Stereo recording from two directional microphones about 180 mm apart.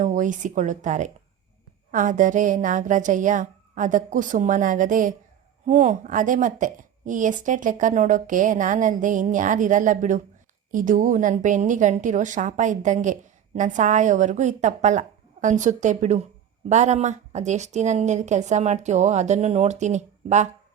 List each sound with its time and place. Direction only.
0.0 s a woman's voice: 45° right (ahead or behind)